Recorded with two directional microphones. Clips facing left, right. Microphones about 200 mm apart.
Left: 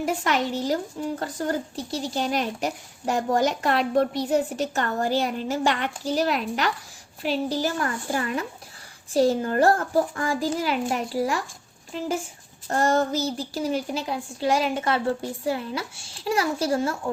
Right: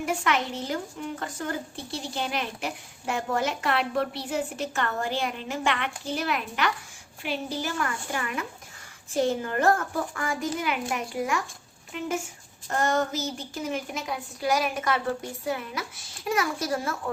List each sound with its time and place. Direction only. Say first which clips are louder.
0.0 s speech: left 3 dB; 40° left (ahead or behind)